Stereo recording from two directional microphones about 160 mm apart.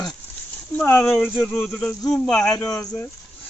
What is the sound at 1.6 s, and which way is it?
Speech, centre (ahead or behind).